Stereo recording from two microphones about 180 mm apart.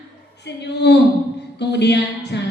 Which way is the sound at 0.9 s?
70° left (ahead or behind).